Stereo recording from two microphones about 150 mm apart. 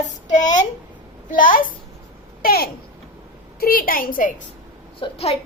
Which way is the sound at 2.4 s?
85° left.